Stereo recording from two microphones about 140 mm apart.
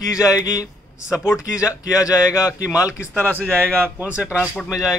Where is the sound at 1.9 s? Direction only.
25° left (ahead or behind).